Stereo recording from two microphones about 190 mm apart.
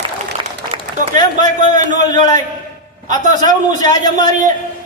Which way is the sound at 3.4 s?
40° right (ahead or behind).